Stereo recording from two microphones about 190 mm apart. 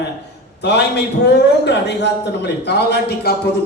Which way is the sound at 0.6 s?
60° left (ahead or behind).